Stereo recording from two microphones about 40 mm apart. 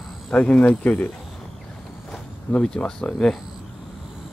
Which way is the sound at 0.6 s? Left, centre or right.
Left.